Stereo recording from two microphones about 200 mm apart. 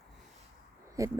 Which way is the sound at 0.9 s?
15° right (ahead or behind).